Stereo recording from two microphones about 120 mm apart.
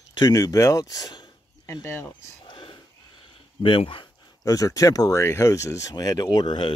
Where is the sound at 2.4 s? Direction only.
45° left (ahead or behind).